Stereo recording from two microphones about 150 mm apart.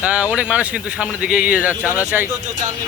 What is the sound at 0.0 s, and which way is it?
Speech, 10° right (ahead or behind).